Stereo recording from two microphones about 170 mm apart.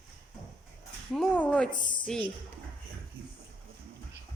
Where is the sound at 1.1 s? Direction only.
5° left (ahead or behind).